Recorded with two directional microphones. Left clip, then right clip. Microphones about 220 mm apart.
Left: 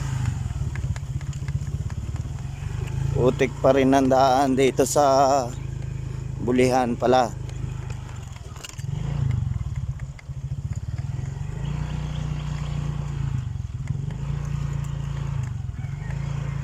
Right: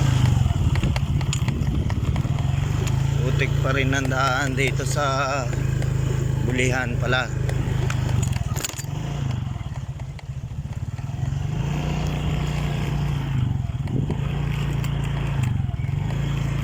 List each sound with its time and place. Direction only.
3.3 s speech: 25° left (ahead or behind)
6.5 s speech: 25° left (ahead or behind)